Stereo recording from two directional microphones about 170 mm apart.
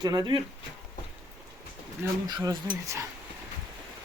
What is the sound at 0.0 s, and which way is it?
Speech, 25° right (ahead or behind).